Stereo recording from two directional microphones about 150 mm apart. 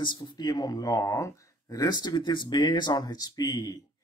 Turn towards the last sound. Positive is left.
turn(degrees=25)  # may be behind; listen again after turning